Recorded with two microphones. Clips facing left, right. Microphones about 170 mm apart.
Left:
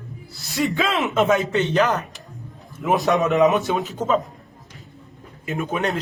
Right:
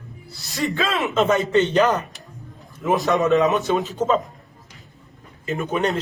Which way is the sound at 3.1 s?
20° left (ahead or behind).